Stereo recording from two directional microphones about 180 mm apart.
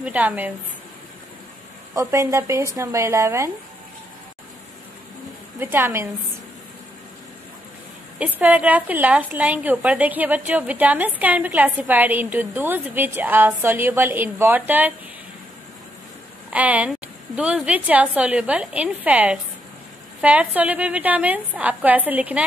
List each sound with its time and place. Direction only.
0.0 s a woman's voice: 10° right (ahead or behind)
2.0 s a woman's voice: 15° right (ahead or behind)
5.6 s a woman's voice: 10° right (ahead or behind)
8.2 s a woman's voice: 10° right (ahead or behind)
16.5 s a woman's voice: 10° right (ahead or behind)